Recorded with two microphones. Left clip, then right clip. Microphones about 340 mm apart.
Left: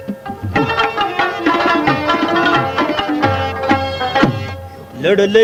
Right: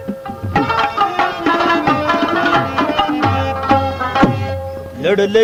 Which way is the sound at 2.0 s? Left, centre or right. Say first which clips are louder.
Left 1 dB; right.